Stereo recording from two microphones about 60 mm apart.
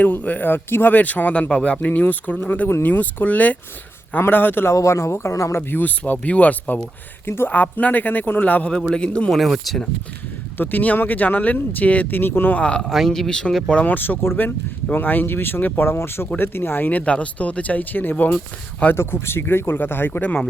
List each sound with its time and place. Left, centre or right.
0.0 s speech: left
4.7 s speech: left
5.7 s speech: left
7.3 s speech: left
7.5 s speech: left
9.3 s speech: centre
10.6 s speech: left
12.5 s speech: centre
12.8 s speech: centre
13.7 s speech: left
18.9 s speech: left